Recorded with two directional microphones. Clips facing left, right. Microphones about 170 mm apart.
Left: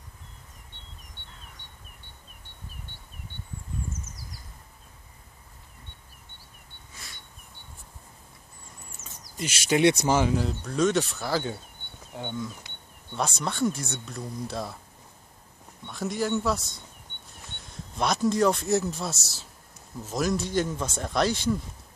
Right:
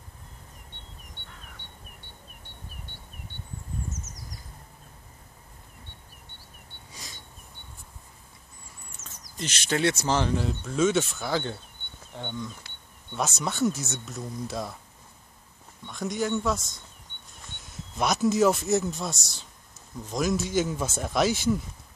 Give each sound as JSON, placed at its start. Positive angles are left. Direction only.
{"t": 9.0, "sound": "a sound", "side_deg": -90}
{"t": 9.4, "sound": "speech", "side_deg": 10}
{"t": 13.1, "sound": "speech", "side_deg": -5}
{"t": 15.9, "sound": "speech", "side_deg": 0}